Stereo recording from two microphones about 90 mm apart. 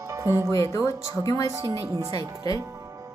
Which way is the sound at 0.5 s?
35° left (ahead or behind).